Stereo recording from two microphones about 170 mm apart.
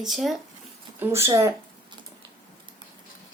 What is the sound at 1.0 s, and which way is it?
Speech, 15° right (ahead or behind).